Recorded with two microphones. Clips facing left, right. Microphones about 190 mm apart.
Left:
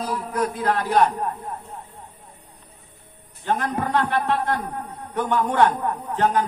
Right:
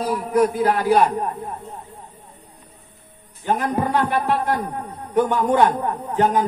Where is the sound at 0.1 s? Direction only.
10° right (ahead or behind).